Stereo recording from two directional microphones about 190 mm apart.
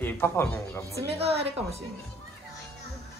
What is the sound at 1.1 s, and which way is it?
Speech, 30° right (ahead or behind).